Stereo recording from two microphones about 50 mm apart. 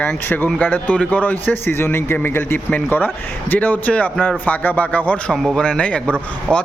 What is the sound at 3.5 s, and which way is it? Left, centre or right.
A man's voice, left.